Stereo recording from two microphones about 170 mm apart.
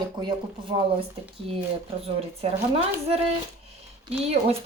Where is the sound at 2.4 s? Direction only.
35° right (ahead or behind).